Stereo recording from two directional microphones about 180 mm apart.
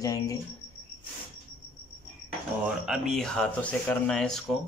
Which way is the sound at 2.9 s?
Centre (ahead or behind).